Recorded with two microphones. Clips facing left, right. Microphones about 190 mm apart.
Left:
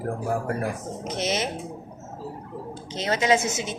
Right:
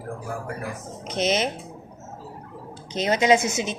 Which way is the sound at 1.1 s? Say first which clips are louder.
Right 4 dB; 20° right (ahead or behind).